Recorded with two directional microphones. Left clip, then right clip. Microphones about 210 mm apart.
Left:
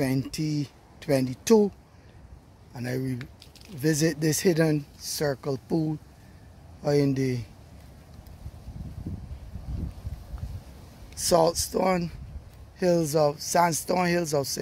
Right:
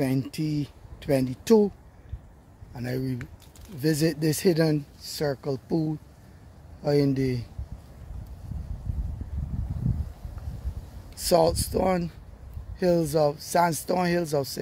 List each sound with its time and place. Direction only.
0.0 s speech: 5° right (ahead or behind)
2.7 s speech: 5° right (ahead or behind)
11.1 s speech: 10° right (ahead or behind)